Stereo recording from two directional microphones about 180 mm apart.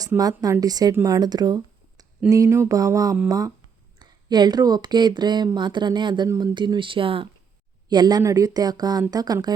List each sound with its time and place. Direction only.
0.2 s speech: 20° right (ahead or behind)
2.3 s a sound: 15° right (ahead or behind)
3.2 s speech: 20° right (ahead or behind)